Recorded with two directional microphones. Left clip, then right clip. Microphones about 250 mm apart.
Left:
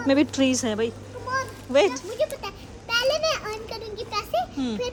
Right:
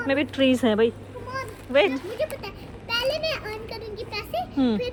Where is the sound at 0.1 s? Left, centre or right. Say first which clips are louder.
Left 1 dB; centre.